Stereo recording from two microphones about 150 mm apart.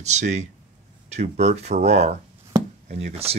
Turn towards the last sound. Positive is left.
turn(degrees=-45)  # may be behind; listen again after turning